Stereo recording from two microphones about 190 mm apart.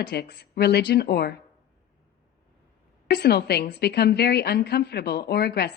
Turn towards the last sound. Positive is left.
turn(degrees=60)  # may be behind; listen again after turning